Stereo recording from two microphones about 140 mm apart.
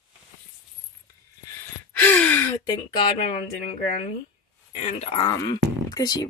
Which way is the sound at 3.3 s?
55° left (ahead or behind).